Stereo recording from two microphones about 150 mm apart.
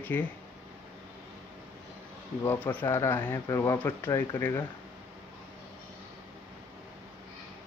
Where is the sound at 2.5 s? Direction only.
10° left (ahead or behind).